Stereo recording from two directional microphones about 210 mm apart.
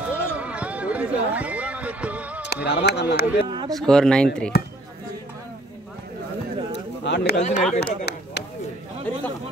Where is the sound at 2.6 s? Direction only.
55° left (ahead or behind).